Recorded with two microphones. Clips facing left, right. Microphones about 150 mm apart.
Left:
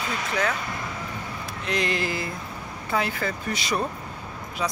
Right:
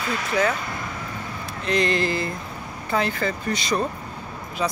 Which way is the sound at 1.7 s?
5° left (ahead or behind).